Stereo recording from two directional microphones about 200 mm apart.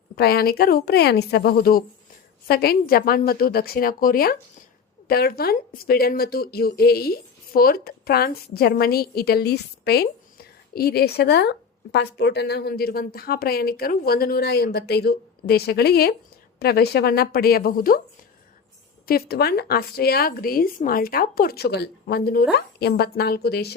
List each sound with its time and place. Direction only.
0.2 s a woman's voice: 50° left (ahead or behind)
19.0 s a woman's voice: 50° left (ahead or behind)